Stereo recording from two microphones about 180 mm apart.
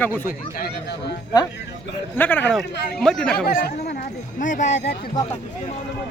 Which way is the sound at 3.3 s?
55° left (ahead or behind).